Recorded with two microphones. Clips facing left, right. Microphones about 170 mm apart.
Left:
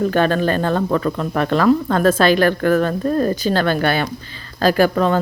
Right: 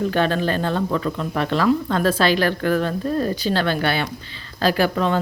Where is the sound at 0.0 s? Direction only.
45° left (ahead or behind).